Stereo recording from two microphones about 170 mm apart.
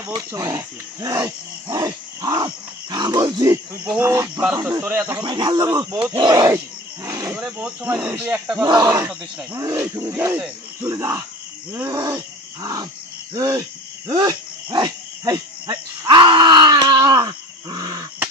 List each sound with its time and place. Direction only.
0.3 s speech: 15° right (ahead or behind)
1.0 s wild animals: 20° right (ahead or behind)
2.9 s speech: 25° right (ahead or behind)
5.2 s speech: 25° right (ahead or behind)
7.3 s speech: 5° right (ahead or behind)
8.6 s speech: 25° right (ahead or behind)
8.9 s speech: 10° right (ahead or behind)
14.1 s dog: 25° right (ahead or behind)